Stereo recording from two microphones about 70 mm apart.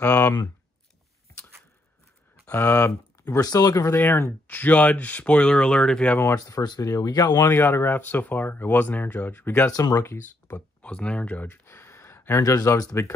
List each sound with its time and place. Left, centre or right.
0.0 s speech: left
2.4 s speech: left
3.3 s speech: left
3.8 s speech: left; by 6.1 s centre
6.1 s speech: left
6.4 s speech: left
6.8 s speech: left
7.5 s speech: left
9.7 s speech: left
9.9 s speech: left
10.8 s speech: centre
11.6 s a sound: left
12.4 s speech: left